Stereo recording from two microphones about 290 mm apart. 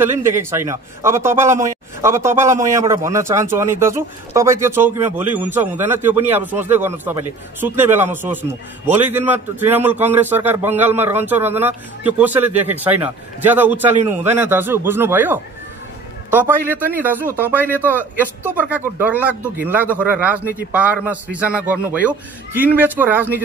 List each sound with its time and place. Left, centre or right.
0.0 s a man's voice: centre